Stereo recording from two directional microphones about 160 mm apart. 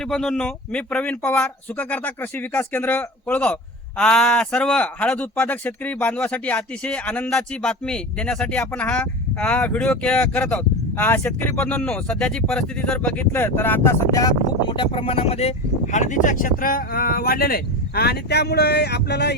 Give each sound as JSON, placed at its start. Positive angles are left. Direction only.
{"t": 0.0, "sound": "speech", "side_deg": 0}
{"t": 14.8, "sound": "speech", "side_deg": 35}